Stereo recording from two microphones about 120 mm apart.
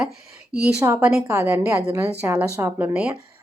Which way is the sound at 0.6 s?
15° right (ahead or behind).